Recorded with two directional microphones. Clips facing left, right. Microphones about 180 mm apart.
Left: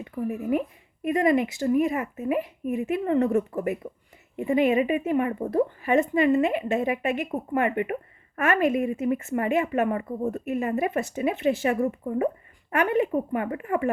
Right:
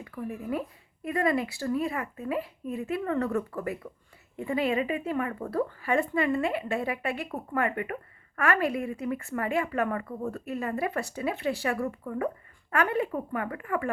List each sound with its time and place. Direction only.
0.0 s speech: 25° left (ahead or behind)